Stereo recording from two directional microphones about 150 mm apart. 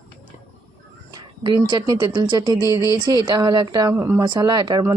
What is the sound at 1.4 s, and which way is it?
Speech, 30° right (ahead or behind).